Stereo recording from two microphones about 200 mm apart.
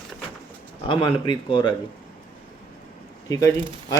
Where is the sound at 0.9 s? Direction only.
25° left (ahead or behind).